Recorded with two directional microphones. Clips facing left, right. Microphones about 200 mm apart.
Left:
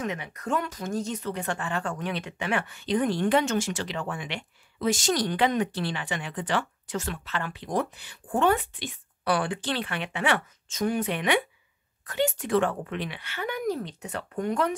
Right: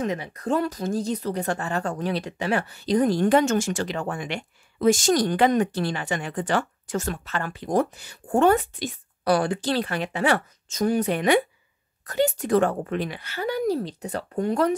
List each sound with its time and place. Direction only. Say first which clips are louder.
0.0 s speech: right 5 dB; 35° right (ahead or behind)